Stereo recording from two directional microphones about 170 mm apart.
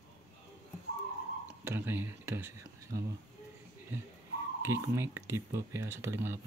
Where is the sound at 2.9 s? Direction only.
65° right (ahead or behind).